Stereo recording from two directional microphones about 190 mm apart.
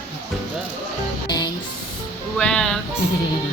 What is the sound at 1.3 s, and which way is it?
Music, 20° left (ahead or behind).